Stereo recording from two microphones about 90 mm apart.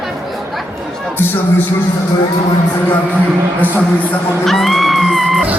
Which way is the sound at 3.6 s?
20° left (ahead or behind).